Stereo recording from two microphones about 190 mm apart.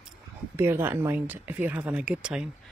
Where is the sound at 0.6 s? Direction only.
10° right (ahead or behind).